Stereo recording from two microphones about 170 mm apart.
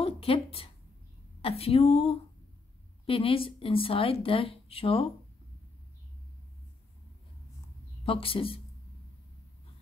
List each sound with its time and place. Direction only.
0.0 s a sound: 35° left (ahead or behind)
1.4 s speech: 35° left (ahead or behind)
8.0 s speech: 30° left (ahead or behind)